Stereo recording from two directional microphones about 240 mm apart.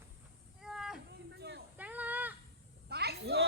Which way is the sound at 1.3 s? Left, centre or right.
Right.